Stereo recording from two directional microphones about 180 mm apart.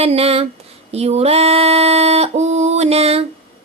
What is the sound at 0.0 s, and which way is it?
Female singing, 35° right (ahead or behind).